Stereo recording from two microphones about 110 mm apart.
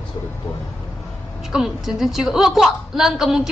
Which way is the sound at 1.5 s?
5° right (ahead or behind).